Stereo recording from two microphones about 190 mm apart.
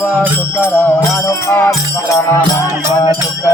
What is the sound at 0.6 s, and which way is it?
Music, 10° left (ahead or behind).